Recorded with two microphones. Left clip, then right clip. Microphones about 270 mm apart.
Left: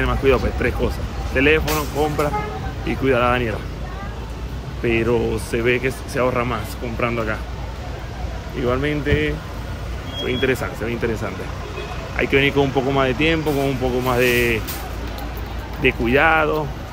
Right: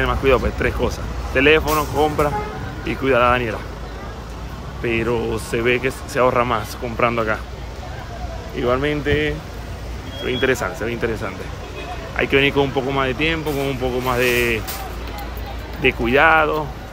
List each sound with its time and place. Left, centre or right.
0.0 s speech: centre
4.8 s speech: centre
8.5 s speech: centre
15.8 s speech: centre